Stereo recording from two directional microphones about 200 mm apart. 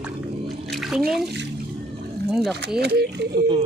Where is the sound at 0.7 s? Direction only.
Centre (ahead or behind).